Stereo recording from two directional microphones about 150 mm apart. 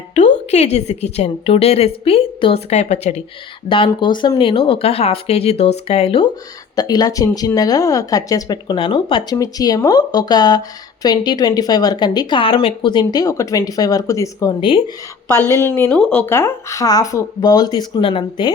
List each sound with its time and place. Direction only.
0.1 s a woman's voice: 50° left (ahead or behind)
3.7 s speech: 35° left (ahead or behind)
6.7 s speech: 25° left (ahead or behind)
9.3 s a woman's voice: 25° left (ahead or behind)